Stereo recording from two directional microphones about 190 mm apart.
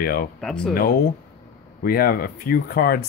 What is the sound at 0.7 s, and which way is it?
Speech, 50° left (ahead or behind).